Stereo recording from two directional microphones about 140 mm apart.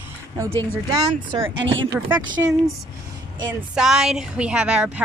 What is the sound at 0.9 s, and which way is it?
Speech, 30° right (ahead or behind).